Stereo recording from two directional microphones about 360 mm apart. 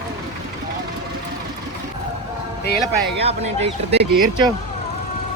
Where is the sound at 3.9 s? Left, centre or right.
Centre.